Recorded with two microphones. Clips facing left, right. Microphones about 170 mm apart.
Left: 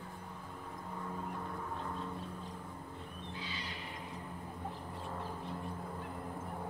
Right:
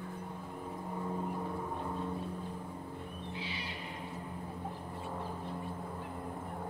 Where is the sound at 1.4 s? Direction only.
15° right (ahead or behind).